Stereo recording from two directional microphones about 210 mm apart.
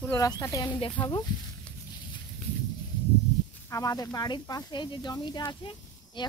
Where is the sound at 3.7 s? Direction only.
15° left (ahead or behind).